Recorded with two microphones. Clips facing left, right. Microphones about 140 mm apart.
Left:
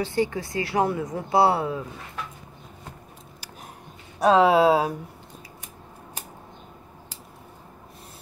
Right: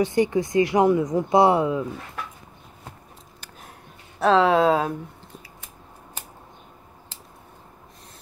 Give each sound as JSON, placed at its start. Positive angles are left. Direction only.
{"t": 0.0, "sound": "speech", "side_deg": -20}
{"t": 4.2, "sound": "speech", "side_deg": 15}